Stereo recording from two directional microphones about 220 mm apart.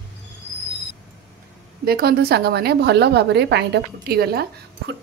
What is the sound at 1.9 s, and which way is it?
A woman's voice, 45° right (ahead or behind).